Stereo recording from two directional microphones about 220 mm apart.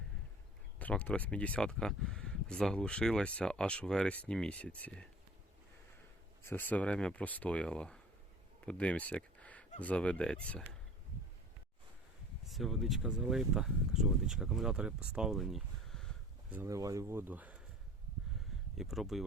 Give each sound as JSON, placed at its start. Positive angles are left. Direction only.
{"t": 0.8, "sound": "speech", "side_deg": 5}
{"t": 6.4, "sound": "speech", "side_deg": 10}
{"t": 8.6, "sound": "a sound", "side_deg": 5}
{"t": 9.8, "sound": "speech", "side_deg": 5}
{"t": 12.5, "sound": "speech", "side_deg": 0}
{"t": 16.6, "sound": "speech", "side_deg": -15}
{"t": 18.8, "sound": "speech", "side_deg": 0}